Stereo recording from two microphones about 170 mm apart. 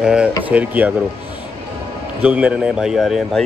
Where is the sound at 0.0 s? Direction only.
5° right (ahead or behind).